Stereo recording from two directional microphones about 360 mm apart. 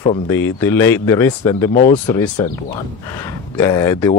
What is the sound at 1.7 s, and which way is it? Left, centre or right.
Speech, left.